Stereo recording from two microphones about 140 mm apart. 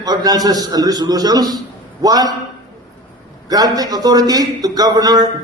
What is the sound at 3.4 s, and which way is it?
A man's voice, 25° right (ahead or behind).